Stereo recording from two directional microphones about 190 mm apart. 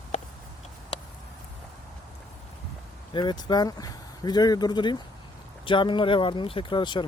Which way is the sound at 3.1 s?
25° left (ahead or behind).